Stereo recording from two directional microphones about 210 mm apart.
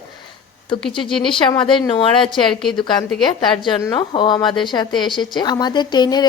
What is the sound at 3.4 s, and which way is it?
A woman's voice, 20° left (ahead or behind).